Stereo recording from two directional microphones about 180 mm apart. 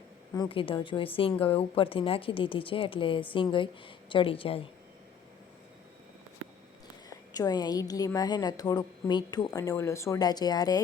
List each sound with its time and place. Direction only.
0.3 s a woman's voice: 30° left (ahead or behind)
7.1 s a woman's voice: 20° left (ahead or behind)